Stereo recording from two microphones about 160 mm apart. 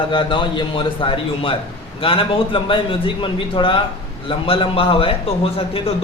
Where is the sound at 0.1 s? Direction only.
30° left (ahead or behind).